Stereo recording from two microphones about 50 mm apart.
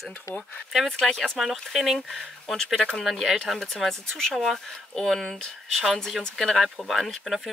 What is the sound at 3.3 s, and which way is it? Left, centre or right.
Speech, centre.